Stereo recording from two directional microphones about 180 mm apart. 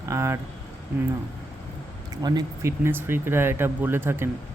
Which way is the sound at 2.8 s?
10° right (ahead or behind).